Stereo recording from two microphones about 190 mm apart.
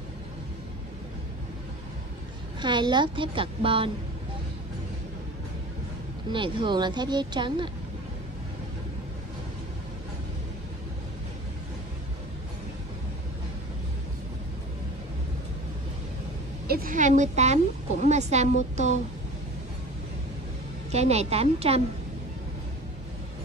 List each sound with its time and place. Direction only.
2.6 s speech: 25° right (ahead or behind)
6.3 s speech: 25° right (ahead or behind)
16.6 s a woman's voice: 50° right (ahead or behind)
20.9 s a woman's voice: 35° right (ahead or behind)